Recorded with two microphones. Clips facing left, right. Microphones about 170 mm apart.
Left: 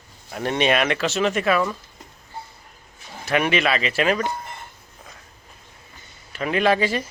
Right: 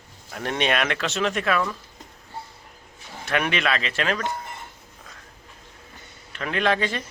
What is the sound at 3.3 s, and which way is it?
Speech, 5° left (ahead or behind).